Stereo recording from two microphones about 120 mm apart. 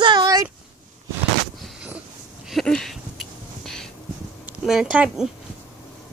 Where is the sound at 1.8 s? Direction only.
10° right (ahead or behind).